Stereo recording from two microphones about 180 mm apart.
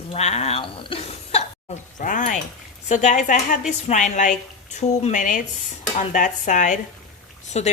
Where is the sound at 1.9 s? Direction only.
45° left (ahead or behind).